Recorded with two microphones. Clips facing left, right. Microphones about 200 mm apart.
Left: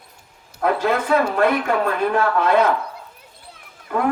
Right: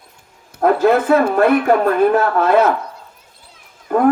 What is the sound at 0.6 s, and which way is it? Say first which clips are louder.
Speech: right 7 dB; 50° right (ahead or behind).